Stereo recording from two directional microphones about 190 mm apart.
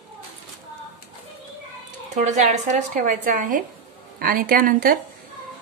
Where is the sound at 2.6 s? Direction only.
40° right (ahead or behind).